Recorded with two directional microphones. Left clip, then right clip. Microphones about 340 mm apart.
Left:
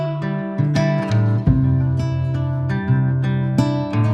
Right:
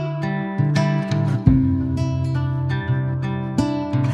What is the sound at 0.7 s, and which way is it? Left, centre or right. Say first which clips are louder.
Music: left 4 dB; centre.